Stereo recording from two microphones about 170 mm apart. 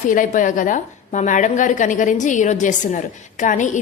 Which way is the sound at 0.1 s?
50° left (ahead or behind).